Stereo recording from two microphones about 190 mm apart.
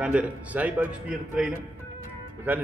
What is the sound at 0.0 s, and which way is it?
Speech, 5° right (ahead or behind).